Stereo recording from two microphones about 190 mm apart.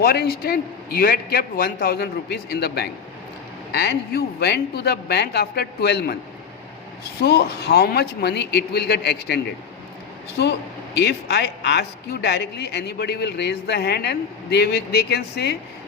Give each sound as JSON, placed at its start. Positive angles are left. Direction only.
{"t": 0.0, "sound": "speech", "side_deg": 55}
{"t": 7.2, "sound": "speech", "side_deg": 55}